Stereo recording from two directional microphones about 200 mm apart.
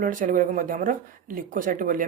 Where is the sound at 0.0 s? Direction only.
40° right (ahead or behind).